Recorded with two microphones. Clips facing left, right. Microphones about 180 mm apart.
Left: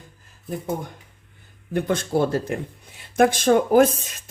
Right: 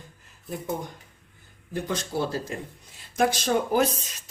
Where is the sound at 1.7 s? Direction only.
55° left (ahead or behind).